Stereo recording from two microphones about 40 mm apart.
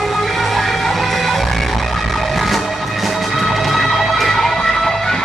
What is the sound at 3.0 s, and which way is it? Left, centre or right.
Music, centre.